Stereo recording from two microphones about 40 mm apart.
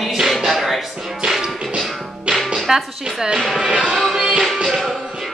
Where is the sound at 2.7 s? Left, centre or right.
Centre.